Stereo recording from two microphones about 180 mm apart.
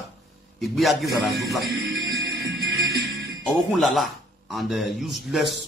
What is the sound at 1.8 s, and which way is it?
Music, 60° right (ahead or behind).